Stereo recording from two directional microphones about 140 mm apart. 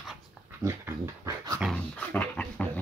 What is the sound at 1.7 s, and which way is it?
Dog, 10° left (ahead or behind).